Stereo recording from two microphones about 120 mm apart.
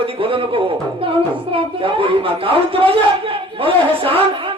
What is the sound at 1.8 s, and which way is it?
A man's voice, 50° right (ahead or behind).